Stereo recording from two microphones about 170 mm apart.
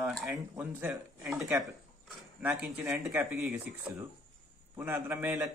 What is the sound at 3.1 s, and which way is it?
Speech, 15° right (ahead or behind).